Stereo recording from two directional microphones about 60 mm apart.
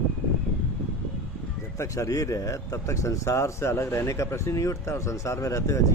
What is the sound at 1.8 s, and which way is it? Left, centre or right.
Speech, left.